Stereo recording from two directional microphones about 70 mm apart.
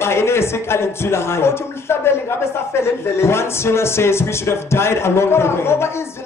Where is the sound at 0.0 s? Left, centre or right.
Left.